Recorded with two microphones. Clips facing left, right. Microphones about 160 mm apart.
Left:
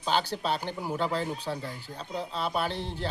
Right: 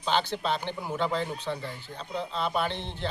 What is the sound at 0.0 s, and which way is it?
Speech, 10° left (ahead or behind).